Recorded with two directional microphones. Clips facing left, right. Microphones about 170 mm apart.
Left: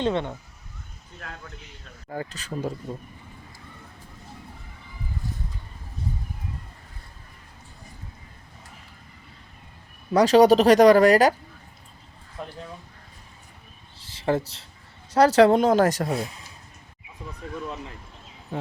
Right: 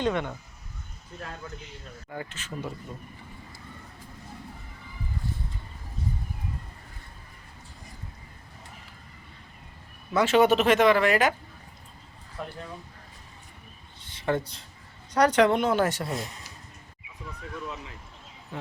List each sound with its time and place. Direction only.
0.0 s speech: 25° left (ahead or behind)
2.0 s speech: 35° left (ahead or behind)
10.1 s speech: 35° left (ahead or behind)
14.1 s speech: 30° left (ahead or behind)